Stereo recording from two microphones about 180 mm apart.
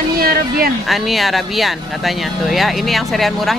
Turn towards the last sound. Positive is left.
turn(degrees=0)  # may be behind; listen again after turning